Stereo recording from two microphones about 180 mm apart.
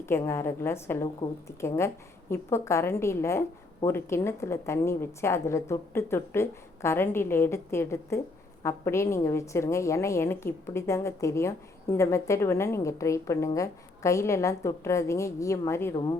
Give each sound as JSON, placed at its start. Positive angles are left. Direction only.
{"t": 0.0, "sound": "a woman's voice", "side_deg": 15}